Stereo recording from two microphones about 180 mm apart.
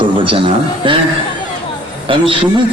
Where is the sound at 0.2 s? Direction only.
30° right (ahead or behind).